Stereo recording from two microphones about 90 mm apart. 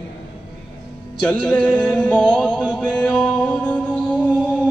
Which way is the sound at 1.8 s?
15° left (ahead or behind).